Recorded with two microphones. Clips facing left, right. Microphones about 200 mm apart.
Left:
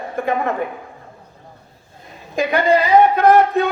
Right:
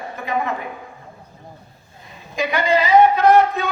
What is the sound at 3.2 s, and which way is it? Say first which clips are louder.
Speech: left 2 dB; 55° left (ahead or behind).